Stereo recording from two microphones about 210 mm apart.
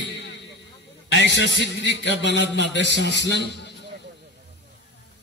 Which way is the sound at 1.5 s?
60° left (ahead or behind).